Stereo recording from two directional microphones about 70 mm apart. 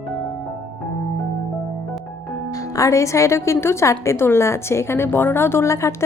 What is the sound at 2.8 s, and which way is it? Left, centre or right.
A woman's voice, left.